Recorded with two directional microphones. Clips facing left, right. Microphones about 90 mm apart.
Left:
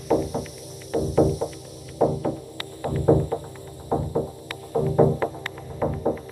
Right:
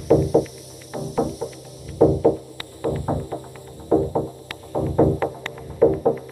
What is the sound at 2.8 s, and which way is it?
Music, centre (ahead or behind).